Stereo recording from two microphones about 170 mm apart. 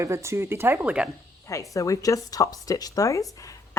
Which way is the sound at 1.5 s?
20° left (ahead or behind).